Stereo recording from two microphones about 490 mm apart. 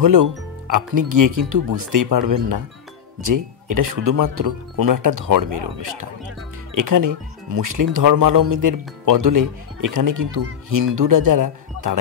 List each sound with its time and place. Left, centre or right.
0.0 s speech: right